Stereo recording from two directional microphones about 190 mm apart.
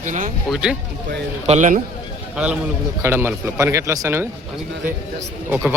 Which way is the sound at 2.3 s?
5° right (ahead or behind).